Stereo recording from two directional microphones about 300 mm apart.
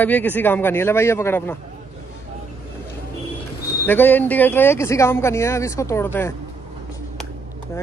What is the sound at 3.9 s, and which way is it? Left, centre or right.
Speech, centre.